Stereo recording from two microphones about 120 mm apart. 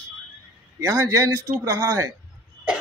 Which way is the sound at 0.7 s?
25° right (ahead or behind).